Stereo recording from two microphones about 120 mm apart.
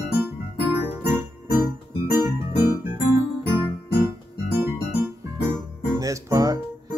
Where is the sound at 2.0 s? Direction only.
20° right (ahead or behind).